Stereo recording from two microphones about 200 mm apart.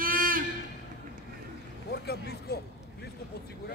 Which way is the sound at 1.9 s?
55° left (ahead or behind).